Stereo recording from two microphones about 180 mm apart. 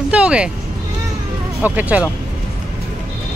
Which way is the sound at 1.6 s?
10° right (ahead or behind).